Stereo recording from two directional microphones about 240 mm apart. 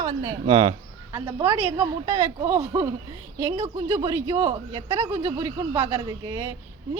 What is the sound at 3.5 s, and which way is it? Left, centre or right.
Speech, right.